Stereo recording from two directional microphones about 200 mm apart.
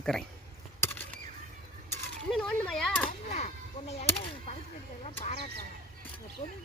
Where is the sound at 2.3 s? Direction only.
5° left (ahead or behind).